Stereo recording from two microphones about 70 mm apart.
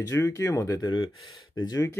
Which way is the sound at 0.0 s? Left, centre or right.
Left.